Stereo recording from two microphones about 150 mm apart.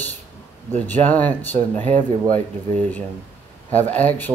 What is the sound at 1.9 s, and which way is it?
Speech, 55° right (ahead or behind).